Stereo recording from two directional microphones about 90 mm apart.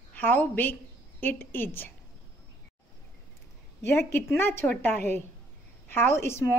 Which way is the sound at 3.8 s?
25° left (ahead or behind).